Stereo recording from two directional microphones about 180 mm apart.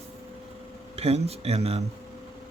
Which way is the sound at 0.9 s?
35° right (ahead or behind).